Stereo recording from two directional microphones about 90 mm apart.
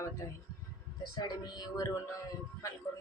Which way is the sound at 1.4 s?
45° left (ahead or behind).